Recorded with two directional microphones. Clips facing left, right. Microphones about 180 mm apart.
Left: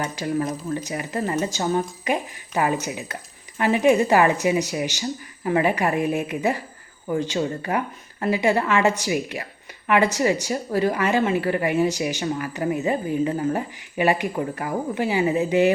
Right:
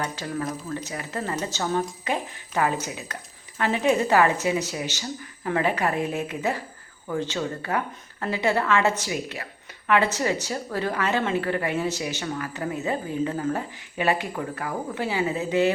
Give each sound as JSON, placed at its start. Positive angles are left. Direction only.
{"t": 0.0, "sound": "speech", "side_deg": 15}